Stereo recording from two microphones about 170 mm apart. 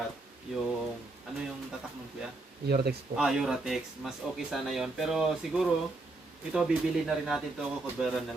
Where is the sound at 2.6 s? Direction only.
70° right (ahead or behind).